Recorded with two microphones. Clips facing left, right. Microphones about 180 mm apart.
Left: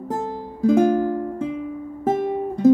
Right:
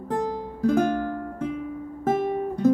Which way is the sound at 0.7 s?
15° left (ahead or behind).